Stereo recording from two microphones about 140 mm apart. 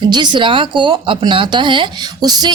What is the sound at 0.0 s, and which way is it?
Speech, 30° right (ahead or behind).